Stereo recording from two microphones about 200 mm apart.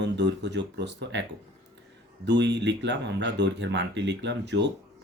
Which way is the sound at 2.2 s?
60° right (ahead or behind).